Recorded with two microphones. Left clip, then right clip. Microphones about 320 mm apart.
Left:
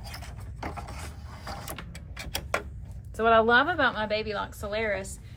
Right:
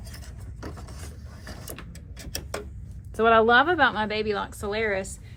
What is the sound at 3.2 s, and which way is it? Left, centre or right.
A woman's voice, centre.